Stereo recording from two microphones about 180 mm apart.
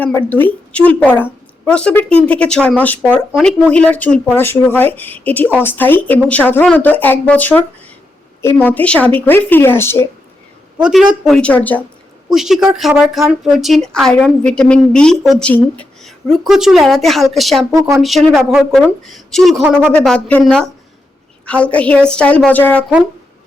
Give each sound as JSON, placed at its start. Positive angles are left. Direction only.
{"t": 0.3, "sound": "a woman's voice", "side_deg": 10}
{"t": 10.8, "sound": "speech", "side_deg": -5}
{"t": 12.3, "sound": "speech", "side_deg": 0}
{"t": 17.7, "sound": "speech", "side_deg": -15}
{"t": 18.0, "sound": "speech", "side_deg": 0}